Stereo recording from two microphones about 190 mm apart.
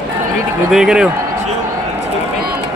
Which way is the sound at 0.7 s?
Centre (ahead or behind).